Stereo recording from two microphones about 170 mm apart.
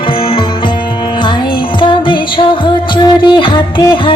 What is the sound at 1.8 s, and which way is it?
Music, 30° left (ahead or behind).